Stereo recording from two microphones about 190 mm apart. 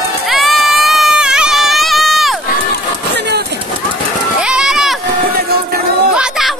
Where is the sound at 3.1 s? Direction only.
60° right (ahead or behind).